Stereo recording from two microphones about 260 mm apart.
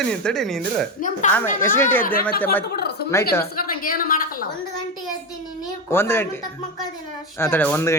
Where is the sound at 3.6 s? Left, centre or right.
Left.